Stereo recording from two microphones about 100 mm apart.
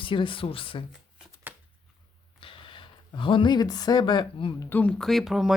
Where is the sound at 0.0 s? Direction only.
55° left (ahead or behind).